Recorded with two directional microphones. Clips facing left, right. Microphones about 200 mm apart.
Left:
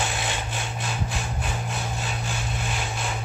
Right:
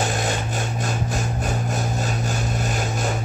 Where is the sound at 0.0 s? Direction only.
45° right (ahead or behind).